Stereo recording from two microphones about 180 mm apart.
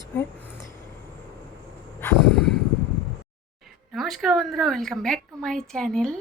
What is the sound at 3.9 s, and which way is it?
A woman's voice, centre (ahead or behind).